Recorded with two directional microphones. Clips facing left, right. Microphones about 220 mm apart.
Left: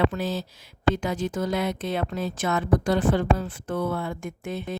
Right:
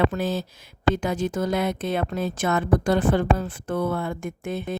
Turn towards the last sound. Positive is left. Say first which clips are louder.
# right 3 dB
turn(degrees=-50)  # may be behind; listen again after turning